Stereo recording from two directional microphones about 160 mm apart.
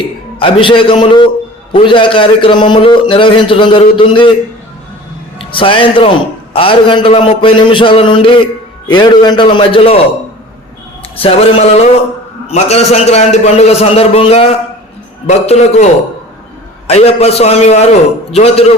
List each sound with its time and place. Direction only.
0.3 s a man's voice: 35° left (ahead or behind)
5.4 s a man's voice: 35° left (ahead or behind)
11.2 s a man's voice: 35° left (ahead or behind)